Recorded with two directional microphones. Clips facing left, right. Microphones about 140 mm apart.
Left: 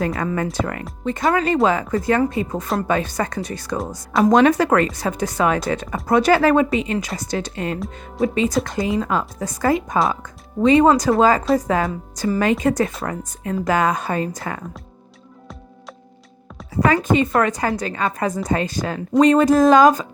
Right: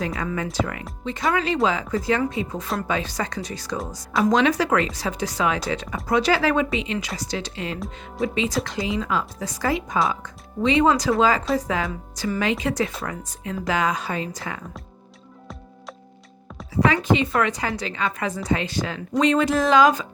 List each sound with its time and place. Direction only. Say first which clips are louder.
0.0 s speech: left 5 dB; 50° left (ahead or behind)
16.8 s speech: left 3 dB; 45° left (ahead or behind)